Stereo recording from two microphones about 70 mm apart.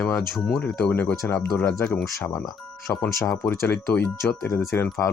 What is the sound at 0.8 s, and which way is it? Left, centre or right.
Speech, left.